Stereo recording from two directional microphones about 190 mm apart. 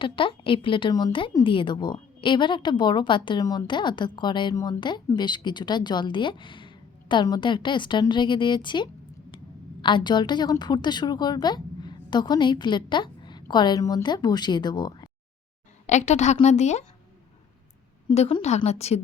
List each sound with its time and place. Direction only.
0.0 s a woman's voice: 25° left (ahead or behind)
15.9 s a woman's voice: 35° left (ahead or behind)
18.1 s a woman's voice: 30° left (ahead or behind)